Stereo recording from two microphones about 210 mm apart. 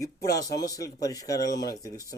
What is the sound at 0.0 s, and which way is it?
Speech, 15° left (ahead or behind).